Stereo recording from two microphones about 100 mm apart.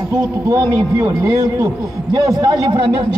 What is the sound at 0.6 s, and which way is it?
A man's voice, 20° right (ahead or behind).